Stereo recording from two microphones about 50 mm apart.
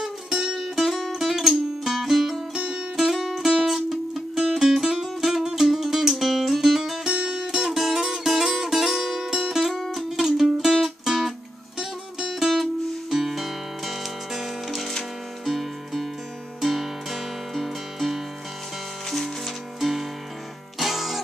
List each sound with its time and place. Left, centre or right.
0.0 s music: centre
2.5 s music: centre
3.0 s music: centre